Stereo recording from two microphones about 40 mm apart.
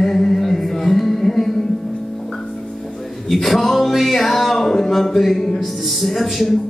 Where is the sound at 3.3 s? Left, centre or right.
Centre.